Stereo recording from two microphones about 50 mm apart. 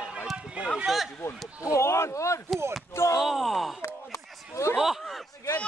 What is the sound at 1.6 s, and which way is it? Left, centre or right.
Speech, left.